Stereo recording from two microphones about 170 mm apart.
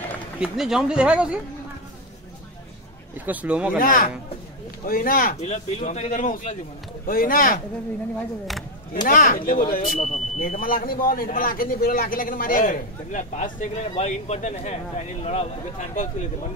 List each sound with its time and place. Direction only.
0.4 s speech: 5° right (ahead or behind)
3.2 s speech: 10° right (ahead or behind)
3.7 s speech: 55° left (ahead or behind)
5.4 s a man's voice: 45° left (ahead or behind)
9.0 s speech: 55° left (ahead or behind)
9.9 s speech: 40° left (ahead or behind)
10.6 s a man's voice: 60° left (ahead or behind)